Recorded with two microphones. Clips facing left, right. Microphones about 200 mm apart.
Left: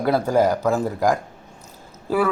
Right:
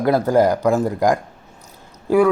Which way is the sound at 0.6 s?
15° right (ahead or behind).